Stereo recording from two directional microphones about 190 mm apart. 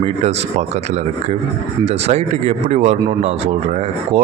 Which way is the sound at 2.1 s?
35° right (ahead or behind).